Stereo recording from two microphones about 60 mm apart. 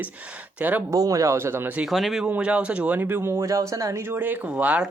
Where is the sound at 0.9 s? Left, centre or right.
Right.